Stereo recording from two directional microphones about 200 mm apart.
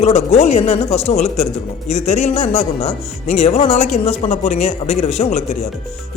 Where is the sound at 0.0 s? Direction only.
30° left (ahead or behind).